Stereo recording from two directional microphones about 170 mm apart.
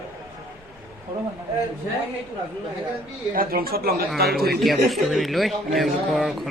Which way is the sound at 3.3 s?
60° right (ahead or behind).